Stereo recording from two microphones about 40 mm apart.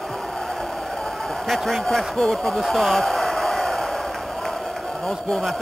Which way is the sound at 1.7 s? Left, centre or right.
Centre.